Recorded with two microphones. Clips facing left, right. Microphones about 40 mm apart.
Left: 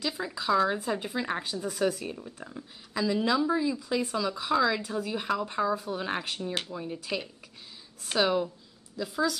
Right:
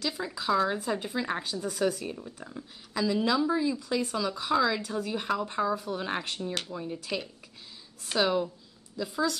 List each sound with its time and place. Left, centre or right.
0.5 s speech: centre
6.4 s speech: centre